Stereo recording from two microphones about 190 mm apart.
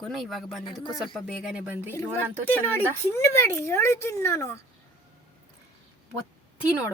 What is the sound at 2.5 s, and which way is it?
Speech, 10° left (ahead or behind).